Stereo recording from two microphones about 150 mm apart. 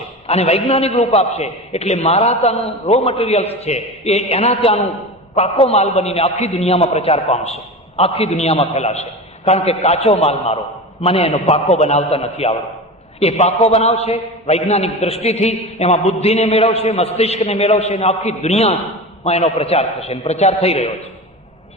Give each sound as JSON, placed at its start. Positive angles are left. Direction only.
{"t": 0.3, "sound": "a man's voice", "side_deg": 45}